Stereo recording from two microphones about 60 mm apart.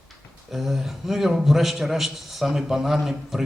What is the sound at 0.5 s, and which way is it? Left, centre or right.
A man's voice, centre.